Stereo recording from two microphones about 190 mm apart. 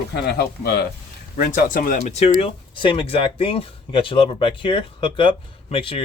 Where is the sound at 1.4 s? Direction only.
45° left (ahead or behind).